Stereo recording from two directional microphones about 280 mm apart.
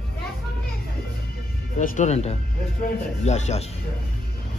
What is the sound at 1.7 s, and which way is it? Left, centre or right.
Speech, left.